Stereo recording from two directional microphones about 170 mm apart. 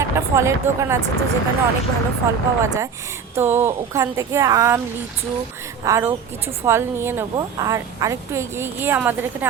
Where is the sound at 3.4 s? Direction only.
15° right (ahead or behind).